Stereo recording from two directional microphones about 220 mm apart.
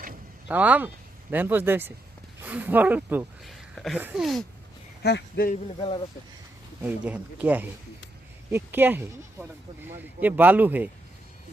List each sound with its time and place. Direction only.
0.4 s speech: 5° right (ahead or behind)
5.0 s speech: 45° left (ahead or behind)
6.8 s speech: 5° right (ahead or behind)